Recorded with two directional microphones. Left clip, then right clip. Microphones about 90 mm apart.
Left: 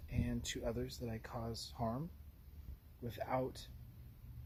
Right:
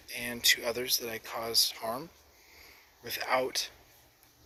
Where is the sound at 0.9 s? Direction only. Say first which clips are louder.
Right 14 dB; 15° left (ahead or behind).